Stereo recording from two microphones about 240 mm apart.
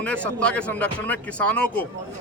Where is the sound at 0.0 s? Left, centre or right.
Centre.